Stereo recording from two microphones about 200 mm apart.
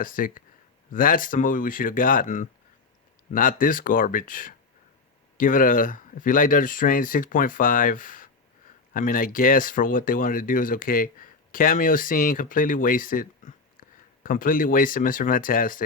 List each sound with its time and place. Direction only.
0.0 s speech: 45° left (ahead or behind)